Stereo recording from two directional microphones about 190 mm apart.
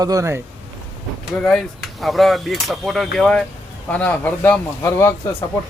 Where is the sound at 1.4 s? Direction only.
5° left (ahead or behind).